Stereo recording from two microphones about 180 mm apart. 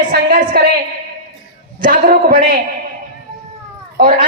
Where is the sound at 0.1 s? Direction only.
55° right (ahead or behind).